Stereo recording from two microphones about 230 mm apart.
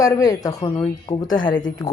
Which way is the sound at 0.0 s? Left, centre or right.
Centre.